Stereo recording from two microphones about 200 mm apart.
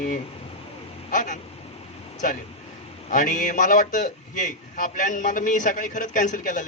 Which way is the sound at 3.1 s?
40° left (ahead or behind).